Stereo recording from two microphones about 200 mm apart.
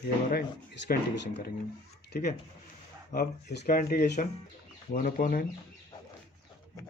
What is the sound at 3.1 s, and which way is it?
Speech, 50° left (ahead or behind).